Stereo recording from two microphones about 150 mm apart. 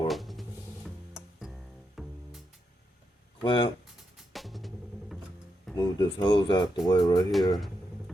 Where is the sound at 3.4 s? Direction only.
30° left (ahead or behind).